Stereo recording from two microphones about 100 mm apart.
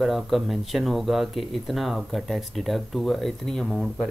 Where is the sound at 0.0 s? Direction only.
Centre (ahead or behind).